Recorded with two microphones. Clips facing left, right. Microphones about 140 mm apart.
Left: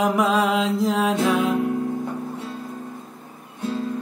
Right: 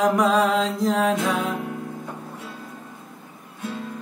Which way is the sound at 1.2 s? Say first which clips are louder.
Left 4 dB; centre (ahead or behind).